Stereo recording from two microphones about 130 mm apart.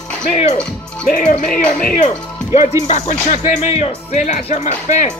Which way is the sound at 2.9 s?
65° left (ahead or behind).